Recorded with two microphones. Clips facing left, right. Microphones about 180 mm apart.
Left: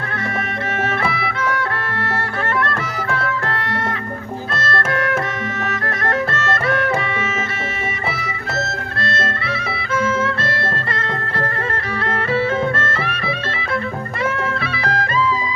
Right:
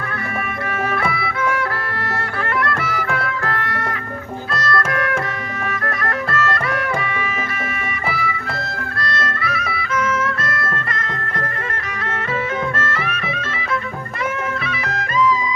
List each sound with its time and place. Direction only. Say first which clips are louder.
0.9 s music: even; 25° left (ahead or behind)
4.6 s music: even; 25° left (ahead or behind)
9.0 s music: left 1 dB; 25° left (ahead or behind)
12.7 s music: left 1 dB; 30° left (ahead or behind)
14.6 s music: left 3 dB; 30° left (ahead or behind)